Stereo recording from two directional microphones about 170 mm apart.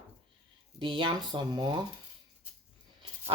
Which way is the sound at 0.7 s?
30° right (ahead or behind).